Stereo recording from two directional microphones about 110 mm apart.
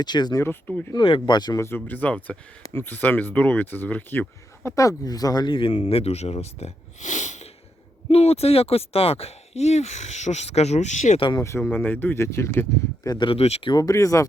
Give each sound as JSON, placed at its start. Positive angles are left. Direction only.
{"t": 0.0, "sound": "speech", "side_deg": 40}
{"t": 0.9, "sound": "speech", "side_deg": 50}
{"t": 1.5, "sound": "speech", "side_deg": 20}
{"t": 4.7, "sound": "speech", "side_deg": 30}
{"t": 5.8, "sound": "speech", "side_deg": 70}
{"t": 8.1, "sound": "speech", "side_deg": 70}
{"t": 11.3, "sound": "speech", "side_deg": 30}
{"t": 13.1, "sound": "speech", "side_deg": 50}
{"t": 13.4, "sound": "speech", "side_deg": 70}
{"t": 13.7, "sound": "speech", "side_deg": 35}